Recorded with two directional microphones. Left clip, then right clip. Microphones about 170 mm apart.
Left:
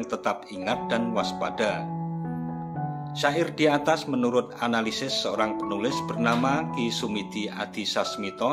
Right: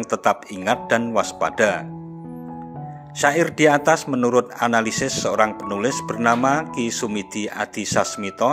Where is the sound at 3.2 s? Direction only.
45° right (ahead or behind).